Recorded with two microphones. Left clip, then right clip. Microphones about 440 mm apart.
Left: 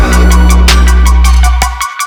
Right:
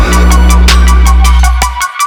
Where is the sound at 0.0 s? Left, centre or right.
Centre.